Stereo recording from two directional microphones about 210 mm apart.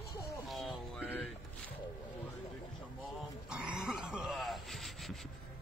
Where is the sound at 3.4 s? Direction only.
5° right (ahead or behind).